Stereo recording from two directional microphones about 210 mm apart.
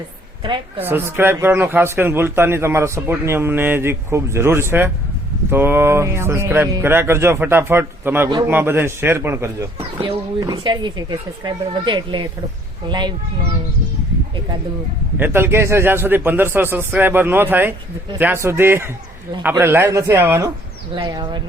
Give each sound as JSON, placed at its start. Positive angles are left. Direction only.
{"t": 0.8, "sound": "speech", "side_deg": -10}
{"t": 15.2, "sound": "speech", "side_deg": -10}
{"t": 20.9, "sound": "speech", "side_deg": -20}